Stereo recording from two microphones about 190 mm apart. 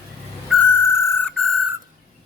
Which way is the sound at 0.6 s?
15° left (ahead or behind).